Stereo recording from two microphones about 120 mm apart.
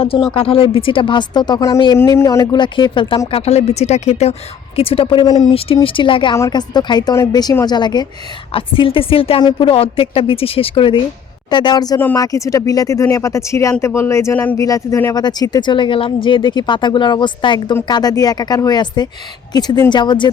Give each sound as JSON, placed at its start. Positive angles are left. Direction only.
{"t": 0.3, "sound": "speech", "side_deg": 50}
{"t": 2.0, "sound": "speech", "side_deg": 25}
{"t": 2.4, "sound": "speech", "side_deg": 40}
{"t": 3.3, "sound": "speech", "side_deg": 60}
{"t": 5.5, "sound": "speech", "side_deg": 50}
{"t": 8.5, "sound": "speech", "side_deg": 45}